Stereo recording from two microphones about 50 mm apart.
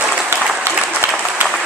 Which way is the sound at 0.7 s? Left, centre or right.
Right.